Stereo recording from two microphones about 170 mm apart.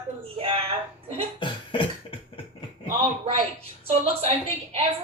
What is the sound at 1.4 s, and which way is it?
Beatboxing, 30° left (ahead or behind).